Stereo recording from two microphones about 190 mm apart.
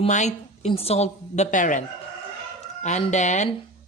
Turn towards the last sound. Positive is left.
turn(degrees=40)  # may be behind; listen again after turning